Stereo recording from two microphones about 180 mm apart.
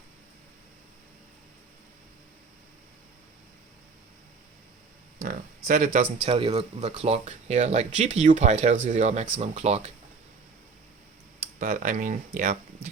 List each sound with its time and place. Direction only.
5.2 s speech: 50° right (ahead or behind)
6.2 s speech: 35° right (ahead or behind)
11.6 s speech: 45° right (ahead or behind)